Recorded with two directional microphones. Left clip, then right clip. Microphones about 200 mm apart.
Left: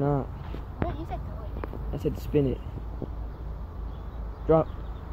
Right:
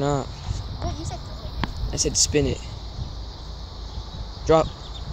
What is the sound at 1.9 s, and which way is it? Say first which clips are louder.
Speech: right 6 dB; 10° right (ahead or behind).